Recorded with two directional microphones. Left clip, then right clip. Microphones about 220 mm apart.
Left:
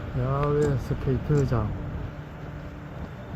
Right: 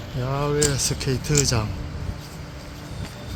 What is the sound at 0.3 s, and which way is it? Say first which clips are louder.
Speech: right 2 dB; 20° right (ahead or behind).